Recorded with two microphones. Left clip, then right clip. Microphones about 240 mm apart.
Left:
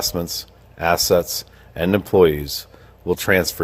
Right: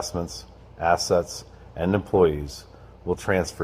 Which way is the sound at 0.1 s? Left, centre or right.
Left.